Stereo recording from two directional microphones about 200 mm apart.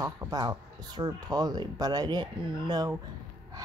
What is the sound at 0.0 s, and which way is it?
Speech, 20° right (ahead or behind).